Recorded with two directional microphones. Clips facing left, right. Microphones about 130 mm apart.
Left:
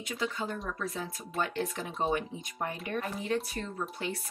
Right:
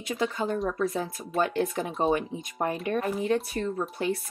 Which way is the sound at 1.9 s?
25° right (ahead or behind).